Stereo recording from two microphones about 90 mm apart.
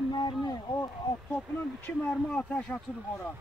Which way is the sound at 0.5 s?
45° left (ahead or behind).